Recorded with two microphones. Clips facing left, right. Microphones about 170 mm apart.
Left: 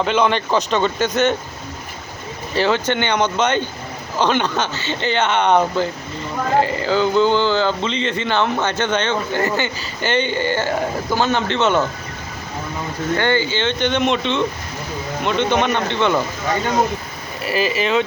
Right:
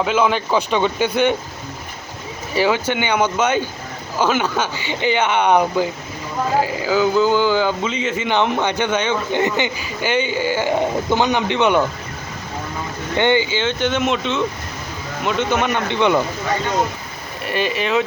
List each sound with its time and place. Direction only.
0.0 s speech: 5° right (ahead or behind)
2.5 s speech: 10° right (ahead or behind)
13.1 s speech: 20° right (ahead or behind)
17.4 s speech: centre (ahead or behind)